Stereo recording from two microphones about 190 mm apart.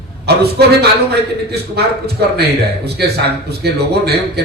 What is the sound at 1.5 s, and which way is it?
Speech, 60° right (ahead or behind).